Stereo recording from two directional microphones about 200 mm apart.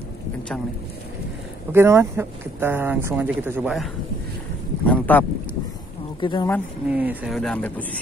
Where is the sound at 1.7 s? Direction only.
10° right (ahead or behind).